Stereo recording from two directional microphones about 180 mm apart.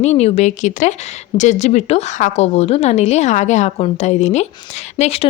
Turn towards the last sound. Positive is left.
turn(degrees=35)  # may be behind; listen again after turning